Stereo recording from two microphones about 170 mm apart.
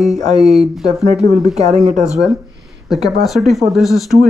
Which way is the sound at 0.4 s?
Centre (ahead or behind).